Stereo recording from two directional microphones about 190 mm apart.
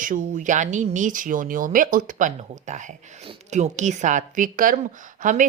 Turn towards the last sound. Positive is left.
turn(degrees=-40)  # may be behind; listen again after turning